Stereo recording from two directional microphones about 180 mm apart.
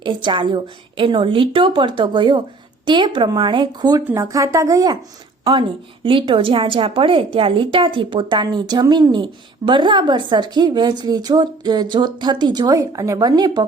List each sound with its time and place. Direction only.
0.0 s a woman's voice: 25° right (ahead or behind)